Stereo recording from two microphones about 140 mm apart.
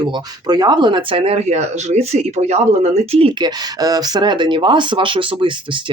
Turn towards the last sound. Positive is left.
turn(degrees=-35)  # may be behind; listen again after turning